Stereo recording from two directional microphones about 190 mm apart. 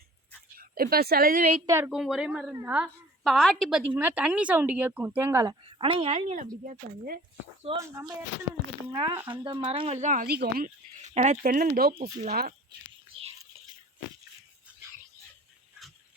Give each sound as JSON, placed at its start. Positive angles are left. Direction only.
{"t": 0.5, "sound": "speech", "side_deg": -50}
{"t": 1.6, "sound": "a woman's voice", "side_deg": -15}
{"t": 1.9, "sound": "a woman's voice", "side_deg": 0}
{"t": 5.8, "sound": "speech", "side_deg": -30}
{"t": 6.7, "sound": "speech", "side_deg": -50}
{"t": 7.8, "sound": "a woman's voice", "side_deg": -15}
{"t": 8.9, "sound": "speech", "side_deg": -25}
{"t": 10.2, "sound": "speech", "side_deg": -55}
{"t": 11.0, "sound": "speech", "side_deg": -40}